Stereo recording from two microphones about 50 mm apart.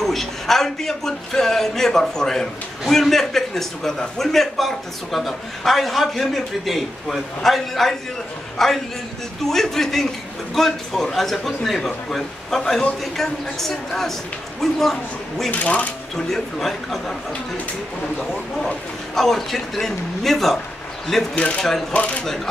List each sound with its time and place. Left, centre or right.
0.0 s a man's voice: centre
15.5 s speech: left
16.3 s a man's voice: centre
19.1 s a man's voice: centre
21.9 s speech: left